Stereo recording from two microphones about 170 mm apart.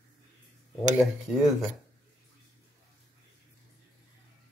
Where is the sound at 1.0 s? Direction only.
Centre (ahead or behind).